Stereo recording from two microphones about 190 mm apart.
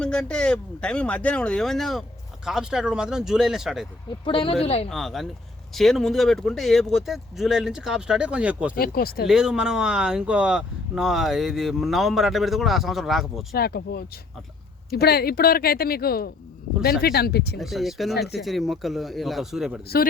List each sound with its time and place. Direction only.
0.0 s speech: 5° left (ahead or behind)
4.3 s speech: 30° left (ahead or behind)
4.9 s speech: centre (ahead or behind)
8.7 s speech: 50° left (ahead or behind)
9.2 s speech: 5° right (ahead or behind)
13.5 s speech: 55° left (ahead or behind)
17.6 s speech: centre (ahead or behind)
18.1 s speech: 60° left (ahead or behind)
18.3 s speech: centre (ahead or behind)